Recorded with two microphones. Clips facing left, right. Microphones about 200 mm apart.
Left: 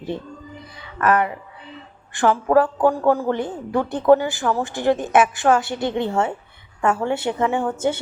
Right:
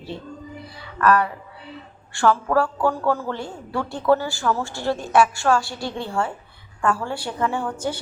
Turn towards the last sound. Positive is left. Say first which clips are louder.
# left 5 dB
turn(degrees=20)  # may be behind; listen again after turning